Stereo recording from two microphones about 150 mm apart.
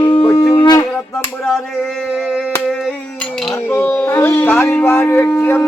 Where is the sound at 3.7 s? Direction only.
10° left (ahead or behind).